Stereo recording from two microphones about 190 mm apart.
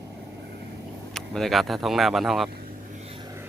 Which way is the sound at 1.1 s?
Centre (ahead or behind).